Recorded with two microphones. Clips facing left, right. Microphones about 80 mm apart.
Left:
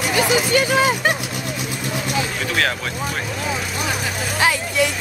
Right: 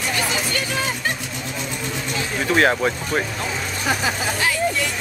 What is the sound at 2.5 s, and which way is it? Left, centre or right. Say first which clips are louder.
Speech: right 6 dB; right.